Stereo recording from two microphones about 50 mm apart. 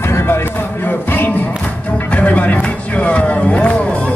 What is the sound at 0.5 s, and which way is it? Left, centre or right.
Music, left.